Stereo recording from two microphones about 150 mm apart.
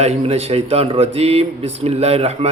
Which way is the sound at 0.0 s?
45° right (ahead or behind).